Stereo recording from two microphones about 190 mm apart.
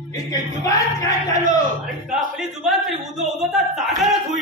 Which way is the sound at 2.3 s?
Centre (ahead or behind).